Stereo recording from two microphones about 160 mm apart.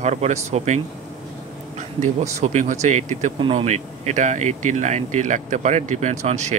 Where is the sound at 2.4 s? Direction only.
50° right (ahead or behind).